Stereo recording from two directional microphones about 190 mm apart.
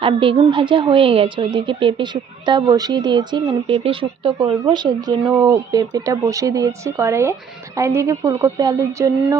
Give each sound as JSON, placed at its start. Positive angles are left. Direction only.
{"t": 0.0, "sound": "a woman's voice", "side_deg": -25}